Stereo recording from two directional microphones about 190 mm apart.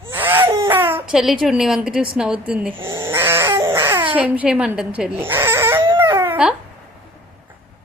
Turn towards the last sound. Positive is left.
turn(degrees=-15)  # may be behind; listen again after turning